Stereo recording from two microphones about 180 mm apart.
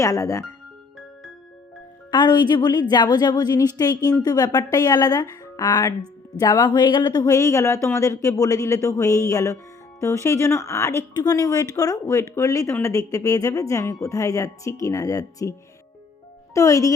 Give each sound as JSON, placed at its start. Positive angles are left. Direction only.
{"t": 0.0, "sound": "speech", "side_deg": 20}
{"t": 2.0, "sound": "a woman's voice", "side_deg": 25}
{"t": 16.6, "sound": "speech", "side_deg": 15}